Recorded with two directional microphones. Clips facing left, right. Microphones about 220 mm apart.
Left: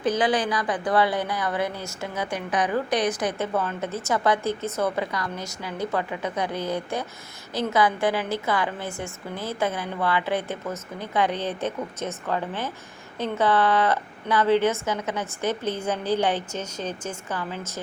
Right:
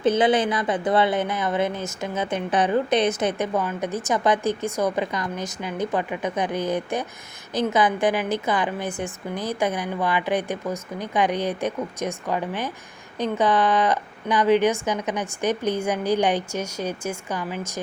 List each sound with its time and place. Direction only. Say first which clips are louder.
0.0 s a woman's voice: right 4 dB; 25° right (ahead or behind)